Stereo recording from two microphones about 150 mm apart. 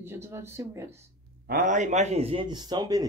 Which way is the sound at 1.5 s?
60° right (ahead or behind).